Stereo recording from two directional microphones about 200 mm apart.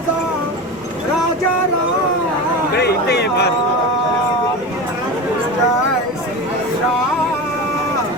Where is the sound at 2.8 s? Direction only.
55° left (ahead or behind).